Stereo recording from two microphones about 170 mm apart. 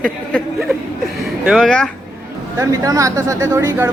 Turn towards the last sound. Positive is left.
turn(degrees=-15)  # may be behind; listen again after turning